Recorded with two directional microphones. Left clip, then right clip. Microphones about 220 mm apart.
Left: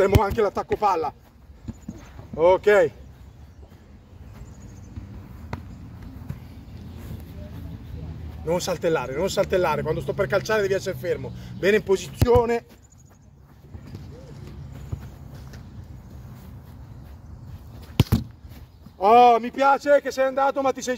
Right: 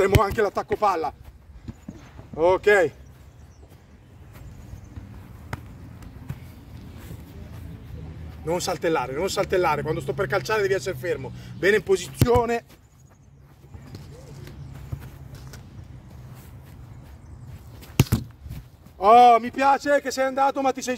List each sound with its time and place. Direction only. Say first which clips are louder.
0.0 s a sound: even; 30° right (ahead or behind)
0.7 s speech: even; 30° right (ahead or behind)
1.7 s horse: left 2 dB; 10° right (ahead or behind)
2.3 s a sound: left 1 dB; 30° right (ahead or behind)
8.5 s speech: left 1 dB; 25° right (ahead or behind)
14.9 s walk: left 1 dB; centre (ahead or behind)
18.1 s speech: left 2 dB; 20° right (ahead or behind)